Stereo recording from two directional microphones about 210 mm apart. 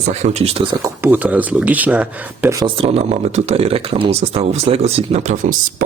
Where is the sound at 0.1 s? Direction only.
30° right (ahead or behind).